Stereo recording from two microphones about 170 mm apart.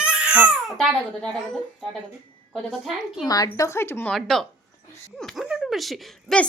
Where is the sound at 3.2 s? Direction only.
20° left (ahead or behind).